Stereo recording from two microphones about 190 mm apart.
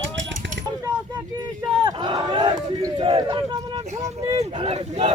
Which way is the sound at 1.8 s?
25° right (ahead or behind).